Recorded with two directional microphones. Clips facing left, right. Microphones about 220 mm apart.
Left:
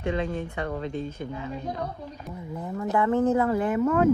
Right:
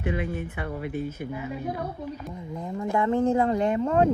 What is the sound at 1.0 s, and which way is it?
Speech, 10° right (ahead or behind).